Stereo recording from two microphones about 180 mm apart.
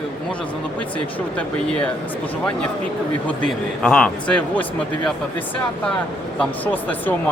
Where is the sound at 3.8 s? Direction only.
5° left (ahead or behind).